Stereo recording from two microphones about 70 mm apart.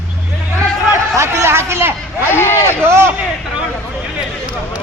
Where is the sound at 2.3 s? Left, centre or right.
Left.